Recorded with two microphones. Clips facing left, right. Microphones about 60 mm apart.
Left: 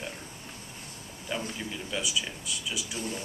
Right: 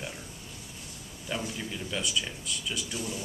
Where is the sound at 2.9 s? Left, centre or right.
Left.